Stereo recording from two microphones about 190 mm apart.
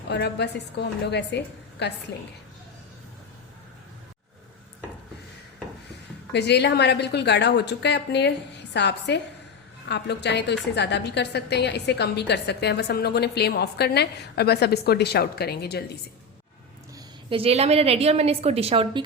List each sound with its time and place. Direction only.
0.1 s a woman's voice: 60° left (ahead or behind)
6.3 s a woman's voice: 60° left (ahead or behind)
17.2 s a woman's voice: 30° right (ahead or behind)